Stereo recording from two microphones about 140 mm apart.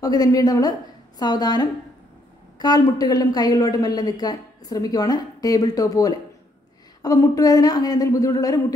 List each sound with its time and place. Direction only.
0.0 s a woman's voice: 25° left (ahead or behind)